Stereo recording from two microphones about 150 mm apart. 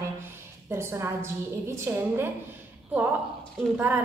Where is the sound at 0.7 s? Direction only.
15° right (ahead or behind).